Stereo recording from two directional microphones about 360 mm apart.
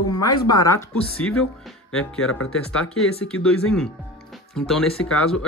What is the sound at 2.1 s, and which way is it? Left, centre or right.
Speech, left.